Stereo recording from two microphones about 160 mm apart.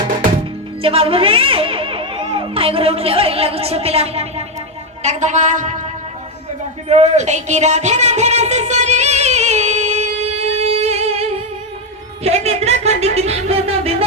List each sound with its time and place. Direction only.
0.8 s a child's voice: 35° right (ahead or behind); by 5.8 s 50° right (ahead or behind)
6.8 s a sound: 40° right (ahead or behind)
12.2 s speech: 40° right (ahead or behind)